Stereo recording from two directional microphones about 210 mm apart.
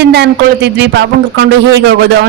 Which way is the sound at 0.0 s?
55° right (ahead or behind).